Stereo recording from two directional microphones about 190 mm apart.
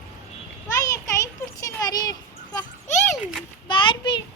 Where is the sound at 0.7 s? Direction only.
15° left (ahead or behind).